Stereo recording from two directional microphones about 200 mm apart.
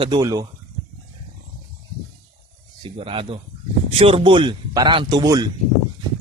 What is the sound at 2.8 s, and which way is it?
A man's voice, 25° right (ahead or behind).